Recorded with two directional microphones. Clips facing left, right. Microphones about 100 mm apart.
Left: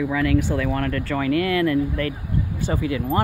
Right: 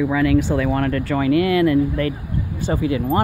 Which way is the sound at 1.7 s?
30° right (ahead or behind).